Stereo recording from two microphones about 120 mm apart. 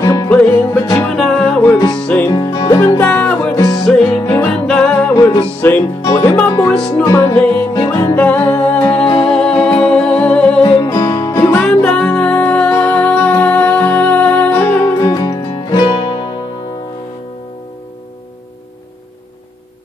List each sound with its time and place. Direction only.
0.0 s music: 30° left (ahead or behind)
0.3 s music: 15° left (ahead or behind)
1.0 s music: 5° left (ahead or behind)
2.3 s music: 35° left (ahead or behind)
3.0 s music: 15° left (ahead or behind)
10.8 s music: 40° left (ahead or behind)
11.1 s music: 25° left (ahead or behind)
11.7 s music: 10° left (ahead or behind)
15.0 s music: 25° left (ahead or behind)